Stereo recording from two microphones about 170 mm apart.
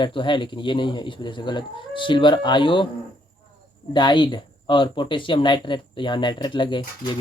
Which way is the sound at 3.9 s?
25° left (ahead or behind).